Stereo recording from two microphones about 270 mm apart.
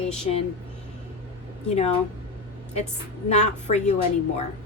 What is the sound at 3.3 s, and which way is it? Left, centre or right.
Speech, left.